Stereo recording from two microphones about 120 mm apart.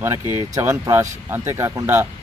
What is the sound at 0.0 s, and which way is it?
Speech, 20° right (ahead or behind).